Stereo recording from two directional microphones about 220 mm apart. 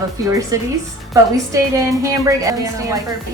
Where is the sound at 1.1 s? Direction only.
15° right (ahead or behind).